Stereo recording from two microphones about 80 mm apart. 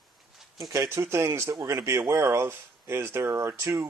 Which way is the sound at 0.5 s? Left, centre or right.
Right.